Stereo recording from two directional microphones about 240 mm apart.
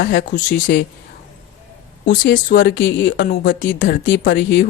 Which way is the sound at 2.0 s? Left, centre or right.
Left.